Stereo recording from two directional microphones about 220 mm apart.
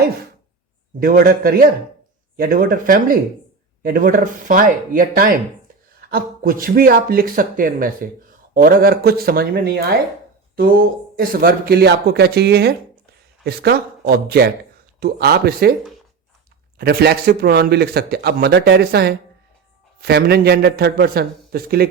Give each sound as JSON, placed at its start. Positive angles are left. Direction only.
{"t": 0.9, "sound": "speech", "side_deg": -40}
{"t": 16.7, "sound": "speech", "side_deg": -45}